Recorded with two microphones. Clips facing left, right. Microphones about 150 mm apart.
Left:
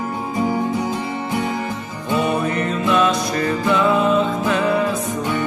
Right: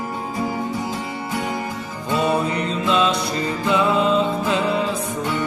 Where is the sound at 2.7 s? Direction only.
20° right (ahead or behind).